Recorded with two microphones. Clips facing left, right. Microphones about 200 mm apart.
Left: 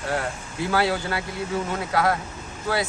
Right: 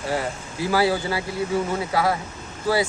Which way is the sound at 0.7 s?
5° right (ahead or behind).